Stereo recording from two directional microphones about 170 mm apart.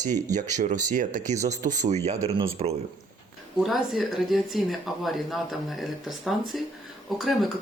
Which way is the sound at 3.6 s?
Centre (ahead or behind).